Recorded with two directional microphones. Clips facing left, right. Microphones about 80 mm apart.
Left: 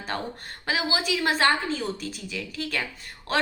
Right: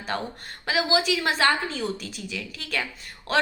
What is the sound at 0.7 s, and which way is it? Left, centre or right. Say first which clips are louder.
A woman's voice: right 3 dB; left.